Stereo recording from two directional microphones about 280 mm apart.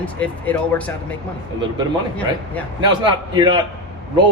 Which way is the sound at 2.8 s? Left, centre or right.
Centre.